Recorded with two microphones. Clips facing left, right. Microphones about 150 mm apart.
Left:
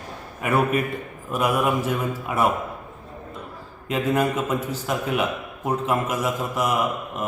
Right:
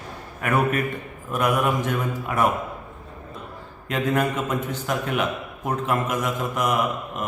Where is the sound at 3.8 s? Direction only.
5° left (ahead or behind).